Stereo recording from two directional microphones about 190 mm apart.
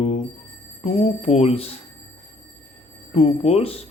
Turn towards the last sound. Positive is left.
turn(degrees=30)  # may be behind; listen again after turning